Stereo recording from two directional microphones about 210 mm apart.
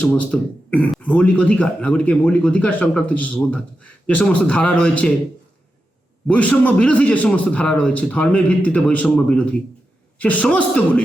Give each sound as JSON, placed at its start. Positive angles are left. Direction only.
{"t": 0.0, "sound": "a man's voice", "side_deg": 5}
{"t": 6.2, "sound": "a man's voice", "side_deg": 5}